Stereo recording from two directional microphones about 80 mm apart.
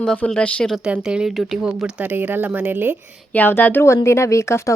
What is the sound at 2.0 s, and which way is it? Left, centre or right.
Speech, right.